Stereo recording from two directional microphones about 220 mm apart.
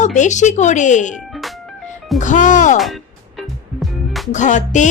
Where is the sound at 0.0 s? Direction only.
35° left (ahead or behind).